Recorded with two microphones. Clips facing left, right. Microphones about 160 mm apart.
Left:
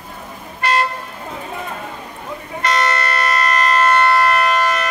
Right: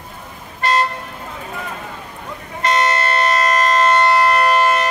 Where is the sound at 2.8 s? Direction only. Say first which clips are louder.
Right 2 dB; 25° right (ahead or behind).